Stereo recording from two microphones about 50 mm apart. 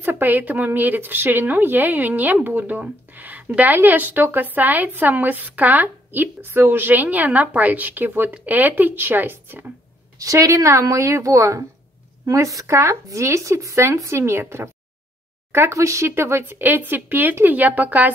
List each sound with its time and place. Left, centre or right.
0.0 s a woman's voice: right
10.3 s a woman's voice: right
15.8 s speech: right
16.5 s a woman's voice: right